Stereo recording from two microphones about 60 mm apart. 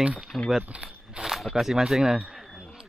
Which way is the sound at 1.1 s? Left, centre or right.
Centre.